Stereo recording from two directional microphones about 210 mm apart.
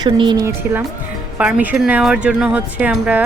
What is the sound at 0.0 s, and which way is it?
Speech, 20° right (ahead or behind).